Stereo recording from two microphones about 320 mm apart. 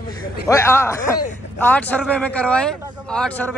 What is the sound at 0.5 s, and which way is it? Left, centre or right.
A man's voice, centre.